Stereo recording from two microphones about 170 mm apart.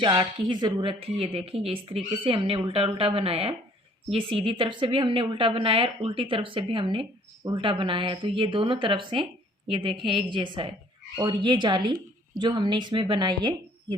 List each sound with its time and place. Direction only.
0.0 s a woman's voice: 25° right (ahead or behind)